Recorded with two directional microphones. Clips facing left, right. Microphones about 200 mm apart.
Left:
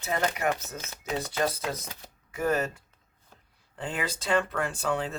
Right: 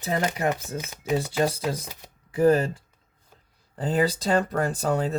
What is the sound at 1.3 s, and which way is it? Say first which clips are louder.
Speech: right 4 dB; 30° right (ahead or behind).